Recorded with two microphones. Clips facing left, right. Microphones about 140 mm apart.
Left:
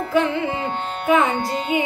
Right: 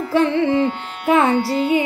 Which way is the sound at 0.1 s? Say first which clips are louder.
Right 4 dB; 30° right (ahead or behind).